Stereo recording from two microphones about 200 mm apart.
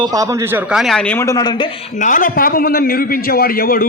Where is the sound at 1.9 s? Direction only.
40° left (ahead or behind).